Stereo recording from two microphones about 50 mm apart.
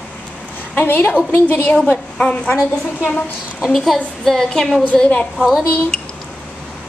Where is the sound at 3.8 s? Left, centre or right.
Centre.